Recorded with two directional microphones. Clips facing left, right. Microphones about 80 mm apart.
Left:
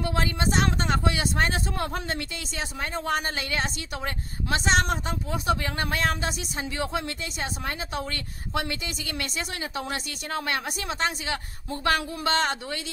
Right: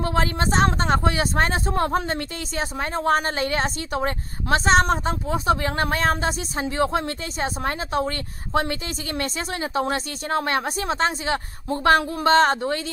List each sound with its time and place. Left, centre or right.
0.0 s speech: right
9.2 s speech: right